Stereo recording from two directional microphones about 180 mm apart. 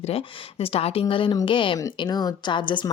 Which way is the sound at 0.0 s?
35° left (ahead or behind).